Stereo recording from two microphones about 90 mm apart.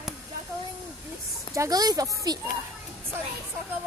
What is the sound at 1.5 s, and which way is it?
Speech, 40° right (ahead or behind).